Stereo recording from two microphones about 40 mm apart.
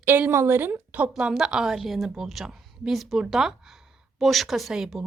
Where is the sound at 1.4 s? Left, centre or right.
Centre.